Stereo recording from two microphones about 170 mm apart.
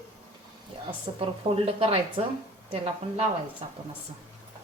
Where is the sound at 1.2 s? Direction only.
35° right (ahead or behind).